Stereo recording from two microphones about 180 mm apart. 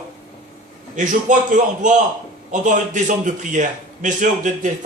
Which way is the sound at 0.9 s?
45° right (ahead or behind).